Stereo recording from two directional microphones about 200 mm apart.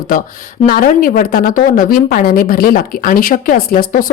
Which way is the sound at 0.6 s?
45° left (ahead or behind).